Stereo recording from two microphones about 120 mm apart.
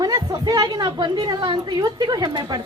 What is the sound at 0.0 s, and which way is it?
A woman's voice, 35° right (ahead or behind).